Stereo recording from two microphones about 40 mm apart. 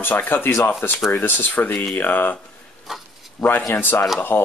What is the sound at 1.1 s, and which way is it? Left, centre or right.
Speech, left.